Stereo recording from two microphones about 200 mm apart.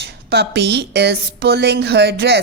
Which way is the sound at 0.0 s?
55° right (ahead or behind).